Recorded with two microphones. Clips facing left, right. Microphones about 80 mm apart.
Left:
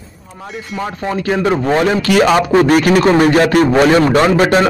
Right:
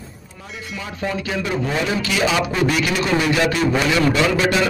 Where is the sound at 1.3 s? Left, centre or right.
Left.